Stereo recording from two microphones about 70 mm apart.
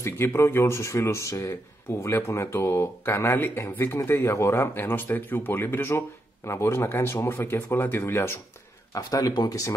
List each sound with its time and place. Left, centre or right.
0.0 s speech: left
1.5 s speech: left
8.9 s speech: left